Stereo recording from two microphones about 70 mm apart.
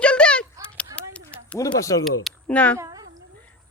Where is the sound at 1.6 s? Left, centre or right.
Left.